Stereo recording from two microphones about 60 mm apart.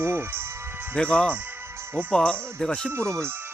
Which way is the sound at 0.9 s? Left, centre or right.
Centre.